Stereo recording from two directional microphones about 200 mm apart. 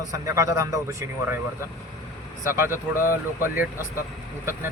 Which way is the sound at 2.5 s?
10° right (ahead or behind).